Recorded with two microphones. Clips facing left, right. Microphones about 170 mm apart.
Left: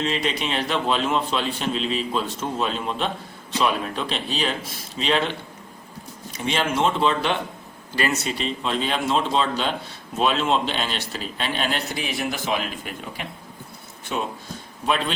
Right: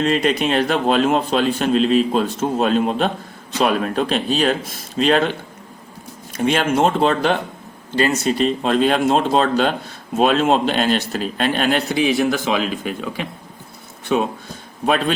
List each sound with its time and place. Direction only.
0.0 s a man's voice: 50° right (ahead or behind)
6.3 s a man's voice: 50° right (ahead or behind)
12.3 s speech: 90° right